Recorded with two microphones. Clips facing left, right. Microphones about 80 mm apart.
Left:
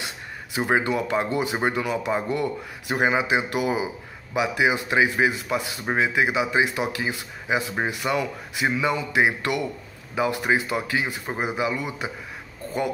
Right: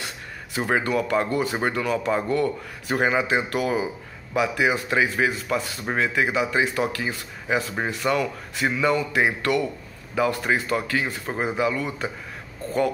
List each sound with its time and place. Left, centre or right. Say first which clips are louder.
0.6 s speech: even; left